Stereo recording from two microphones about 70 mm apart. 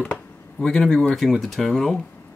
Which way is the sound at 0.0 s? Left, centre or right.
Centre.